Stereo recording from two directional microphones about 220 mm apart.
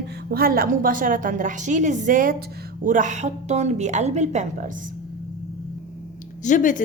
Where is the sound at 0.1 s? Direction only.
45° right (ahead or behind).